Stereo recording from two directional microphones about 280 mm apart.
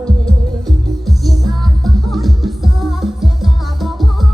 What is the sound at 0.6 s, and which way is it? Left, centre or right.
Music, centre.